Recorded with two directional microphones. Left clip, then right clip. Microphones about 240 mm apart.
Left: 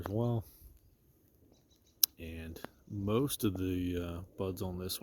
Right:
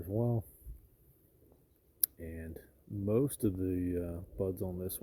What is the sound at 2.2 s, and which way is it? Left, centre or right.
Speech, left.